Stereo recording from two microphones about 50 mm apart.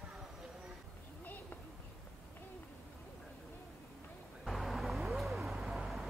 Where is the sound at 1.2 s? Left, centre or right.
Left.